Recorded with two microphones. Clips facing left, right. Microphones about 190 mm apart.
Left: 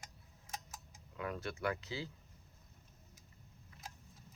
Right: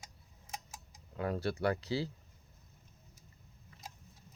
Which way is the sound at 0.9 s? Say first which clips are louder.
Right 6 dB; 35° right (ahead or behind).